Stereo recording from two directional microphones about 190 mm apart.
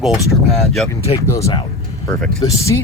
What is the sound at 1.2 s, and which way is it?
Speech, 15° left (ahead or behind).